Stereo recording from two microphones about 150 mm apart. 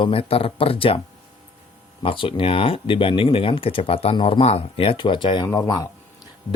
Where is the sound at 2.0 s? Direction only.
35° left (ahead or behind).